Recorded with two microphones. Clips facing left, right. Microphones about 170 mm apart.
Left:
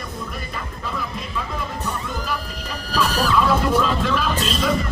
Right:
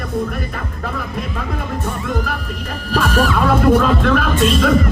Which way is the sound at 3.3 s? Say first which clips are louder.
Right 4 dB; 55° right (ahead or behind).